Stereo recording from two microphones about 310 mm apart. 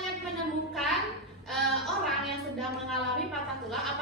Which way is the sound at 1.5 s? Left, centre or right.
Centre.